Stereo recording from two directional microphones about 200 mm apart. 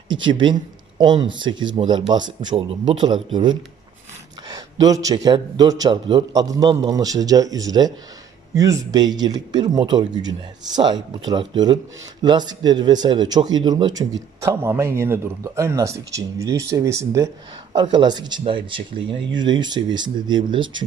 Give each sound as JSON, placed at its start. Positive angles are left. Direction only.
{"t": 0.1, "sound": "speech", "side_deg": -25}
{"t": 4.4, "sound": "a sound", "side_deg": -20}
{"t": 5.0, "sound": "speech", "side_deg": -20}